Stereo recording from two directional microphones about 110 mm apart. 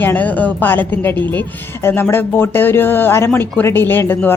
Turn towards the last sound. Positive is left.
turn(degrees=20)  # may be behind; listen again after turning